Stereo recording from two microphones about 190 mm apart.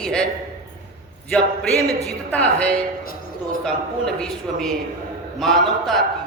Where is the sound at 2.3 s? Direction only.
5° left (ahead or behind).